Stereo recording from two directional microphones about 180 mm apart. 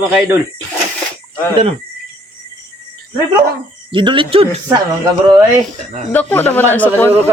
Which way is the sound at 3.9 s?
25° right (ahead or behind).